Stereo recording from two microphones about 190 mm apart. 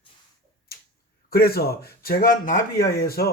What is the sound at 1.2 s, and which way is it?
A man's voice, 55° left (ahead or behind).